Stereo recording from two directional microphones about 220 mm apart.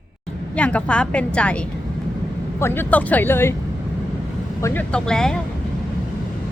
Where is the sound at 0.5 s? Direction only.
5° left (ahead or behind).